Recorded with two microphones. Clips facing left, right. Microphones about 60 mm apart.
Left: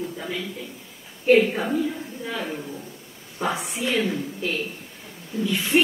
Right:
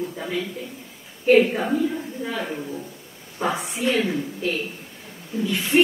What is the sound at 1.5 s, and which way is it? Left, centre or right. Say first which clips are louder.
Speech: right 2 dB; centre.